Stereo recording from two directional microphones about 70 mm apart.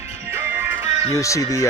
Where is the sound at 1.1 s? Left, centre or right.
Left.